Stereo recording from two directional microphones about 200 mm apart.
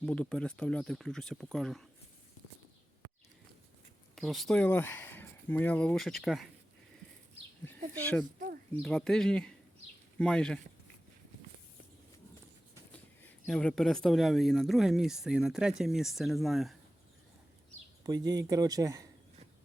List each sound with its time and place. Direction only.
0.0 s speech: 5° left (ahead or behind)
4.1 s speech: centre (ahead or behind)
8.8 s speech: 5° left (ahead or behind)
12.9 s speech: 5° left (ahead or behind)
18.0 s speech: 20° right (ahead or behind)